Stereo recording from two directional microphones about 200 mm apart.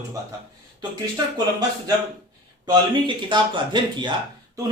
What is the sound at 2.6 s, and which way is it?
A man's voice, 20° right (ahead or behind).